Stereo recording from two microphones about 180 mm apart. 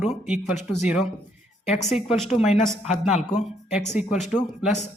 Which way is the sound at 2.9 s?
40° left (ahead or behind).